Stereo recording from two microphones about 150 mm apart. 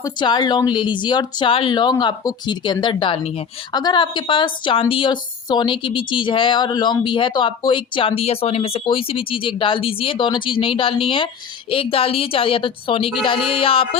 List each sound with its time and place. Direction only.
0.0 s a woman's voice: 30° left (ahead or behind)
3.7 s a woman's voice: 30° left (ahead or behind)